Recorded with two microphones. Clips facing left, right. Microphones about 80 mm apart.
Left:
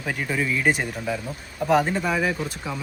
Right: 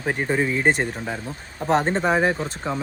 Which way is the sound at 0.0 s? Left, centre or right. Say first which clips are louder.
Right 4 dB; right.